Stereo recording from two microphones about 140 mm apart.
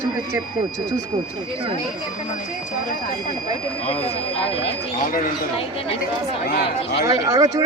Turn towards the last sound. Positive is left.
turn(degrees=-25)  # may be behind; listen again after turning